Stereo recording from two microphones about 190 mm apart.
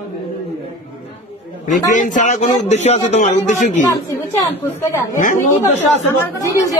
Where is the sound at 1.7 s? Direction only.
40° left (ahead or behind).